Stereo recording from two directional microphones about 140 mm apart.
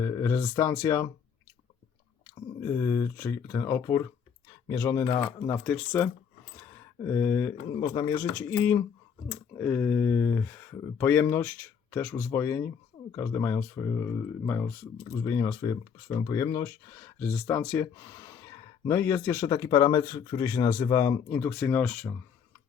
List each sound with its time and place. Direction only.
0.0 s speech: 20° left (ahead or behind)
2.6 s speech: 20° left (ahead or behind)
6.6 s a sound: 20° left (ahead or behind)
7.8 s speech: 25° left (ahead or behind)
8.1 s speech: 15° left (ahead or behind)
17.2 s speech: 10° left (ahead or behind)
17.9 s speech: 25° left (ahead or behind)